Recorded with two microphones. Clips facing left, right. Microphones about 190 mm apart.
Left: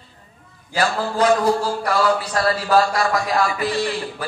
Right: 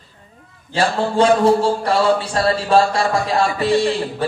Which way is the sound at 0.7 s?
30° right (ahead or behind).